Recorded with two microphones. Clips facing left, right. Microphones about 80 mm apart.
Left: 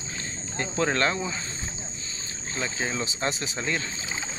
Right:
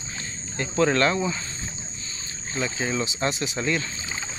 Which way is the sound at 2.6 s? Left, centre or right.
Left.